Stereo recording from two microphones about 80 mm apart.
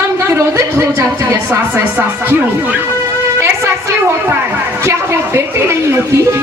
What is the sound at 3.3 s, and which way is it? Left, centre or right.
A woman's voice, right.